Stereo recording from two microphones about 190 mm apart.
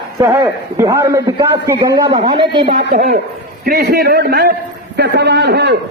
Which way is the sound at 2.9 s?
55° right (ahead or behind).